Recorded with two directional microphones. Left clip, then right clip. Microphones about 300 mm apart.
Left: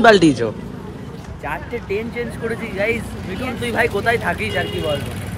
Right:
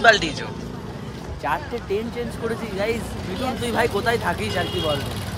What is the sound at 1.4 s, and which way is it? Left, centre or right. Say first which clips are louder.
Speech: right 1 dB; centre.